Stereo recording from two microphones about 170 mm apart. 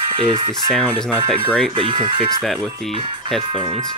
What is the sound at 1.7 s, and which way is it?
Speech, 30° right (ahead or behind).